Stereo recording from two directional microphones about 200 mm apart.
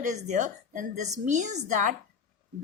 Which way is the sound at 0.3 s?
35° right (ahead or behind).